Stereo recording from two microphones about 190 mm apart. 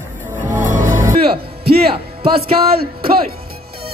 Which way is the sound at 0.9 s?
15° right (ahead or behind).